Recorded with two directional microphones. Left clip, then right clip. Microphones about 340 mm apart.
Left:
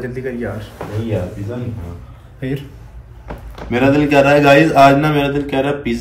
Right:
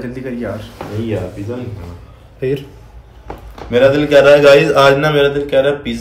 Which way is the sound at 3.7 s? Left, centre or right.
Right.